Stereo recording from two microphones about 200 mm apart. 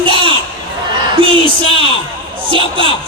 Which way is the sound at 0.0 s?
25° right (ahead or behind).